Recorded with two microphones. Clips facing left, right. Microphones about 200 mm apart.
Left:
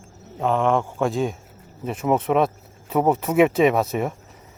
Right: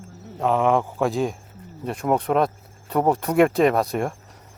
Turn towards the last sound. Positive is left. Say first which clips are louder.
# left 1 dB
turn(degrees=5)  # may be behind; listen again after turning